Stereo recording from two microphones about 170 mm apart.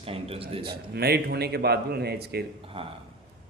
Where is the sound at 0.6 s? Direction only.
70° right (ahead or behind).